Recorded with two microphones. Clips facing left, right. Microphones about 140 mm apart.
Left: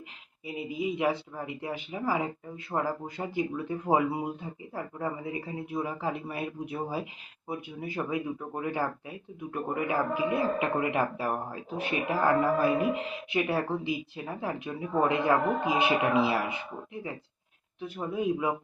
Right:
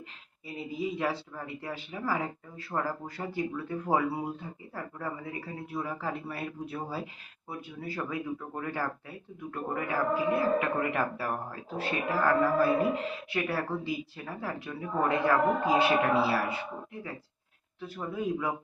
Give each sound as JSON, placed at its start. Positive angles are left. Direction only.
{"t": 0.4, "sound": "speech", "side_deg": 15}